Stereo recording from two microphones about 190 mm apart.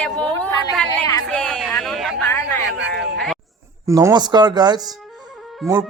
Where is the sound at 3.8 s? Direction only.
20° right (ahead or behind).